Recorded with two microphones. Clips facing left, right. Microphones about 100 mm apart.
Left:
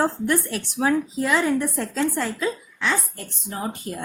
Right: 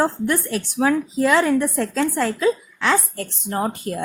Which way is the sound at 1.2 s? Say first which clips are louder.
Right 6 dB; 90° right.